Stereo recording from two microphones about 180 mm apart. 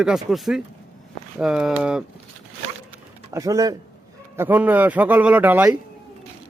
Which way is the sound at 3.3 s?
20° right (ahead or behind).